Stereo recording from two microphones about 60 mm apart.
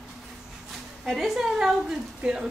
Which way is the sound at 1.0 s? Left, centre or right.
Centre.